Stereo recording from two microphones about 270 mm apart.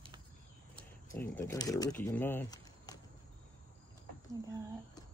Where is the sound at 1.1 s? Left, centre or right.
Centre.